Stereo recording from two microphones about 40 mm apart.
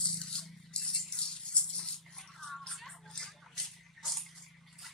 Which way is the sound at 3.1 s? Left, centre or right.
Centre.